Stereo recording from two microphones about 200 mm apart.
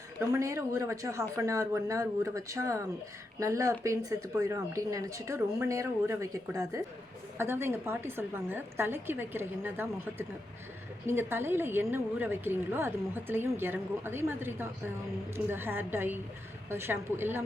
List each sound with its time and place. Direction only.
0.2 s a woman's voice: 15° right (ahead or behind)